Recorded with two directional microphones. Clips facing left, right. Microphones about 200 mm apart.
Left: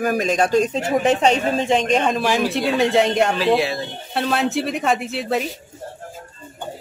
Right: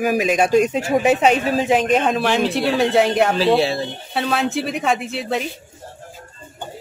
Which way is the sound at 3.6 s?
30° right (ahead or behind).